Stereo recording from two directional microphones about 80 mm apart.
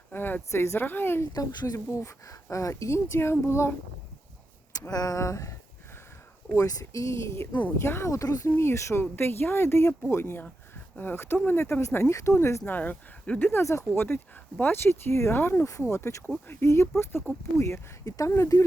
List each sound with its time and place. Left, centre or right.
0.1 s speech: left
1.3 s speech: left
4.9 s speech: left
6.6 s speech: left
8.4 s speech: left
12.7 s speech: left
13.5 s speech: left